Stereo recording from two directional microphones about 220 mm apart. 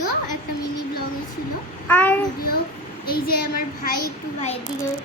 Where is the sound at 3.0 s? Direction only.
45° left (ahead or behind).